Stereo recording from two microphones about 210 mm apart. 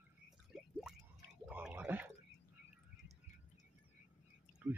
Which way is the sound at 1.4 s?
5° right (ahead or behind).